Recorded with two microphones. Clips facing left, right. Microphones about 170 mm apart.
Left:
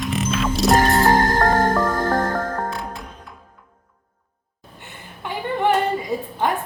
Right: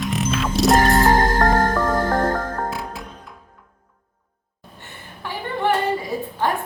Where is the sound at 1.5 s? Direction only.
10° right (ahead or behind).